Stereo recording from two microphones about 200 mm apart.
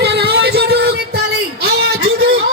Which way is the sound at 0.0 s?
55° right (ahead or behind).